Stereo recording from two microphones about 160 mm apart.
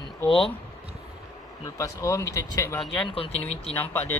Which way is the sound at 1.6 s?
20° left (ahead or behind).